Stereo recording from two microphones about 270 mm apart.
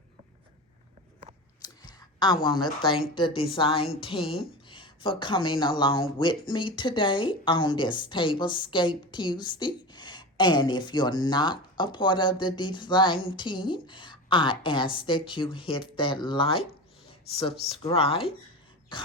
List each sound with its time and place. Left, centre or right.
1.6 s a sound: centre
2.8 s a woman's voice: centre
17.7 s a woman's voice: left